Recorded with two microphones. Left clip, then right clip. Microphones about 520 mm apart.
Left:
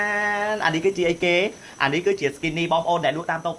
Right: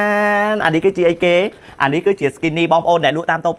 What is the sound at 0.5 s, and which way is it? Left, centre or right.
Speech, right.